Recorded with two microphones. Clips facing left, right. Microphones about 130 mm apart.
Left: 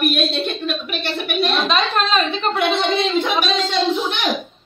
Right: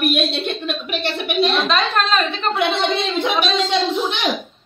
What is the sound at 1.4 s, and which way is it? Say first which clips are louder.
A woman's voice: right 1 dB; centre (ahead or behind).